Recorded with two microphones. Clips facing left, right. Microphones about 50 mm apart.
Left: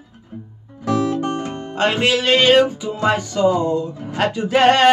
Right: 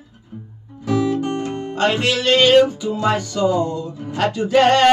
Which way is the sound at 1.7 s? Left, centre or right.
Centre.